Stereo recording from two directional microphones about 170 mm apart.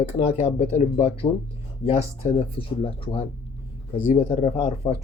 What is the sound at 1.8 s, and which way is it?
Speech, 35° left (ahead or behind).